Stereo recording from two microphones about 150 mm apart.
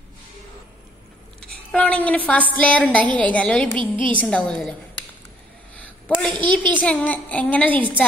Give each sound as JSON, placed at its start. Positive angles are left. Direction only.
{"t": 1.4, "sound": "a woman's voice", "side_deg": 5}
{"t": 3.7, "sound": "a woman's voice", "side_deg": -35}
{"t": 4.2, "sound": "a woman's voice", "side_deg": 5}
{"t": 6.0, "sound": "a sound", "side_deg": 10}
{"t": 6.3, "sound": "a child's voice", "side_deg": -30}
{"t": 6.7, "sound": "a woman's voice", "side_deg": 10}